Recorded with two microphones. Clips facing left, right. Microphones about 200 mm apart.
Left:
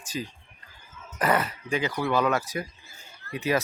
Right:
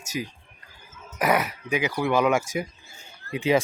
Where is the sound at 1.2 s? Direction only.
10° right (ahead or behind).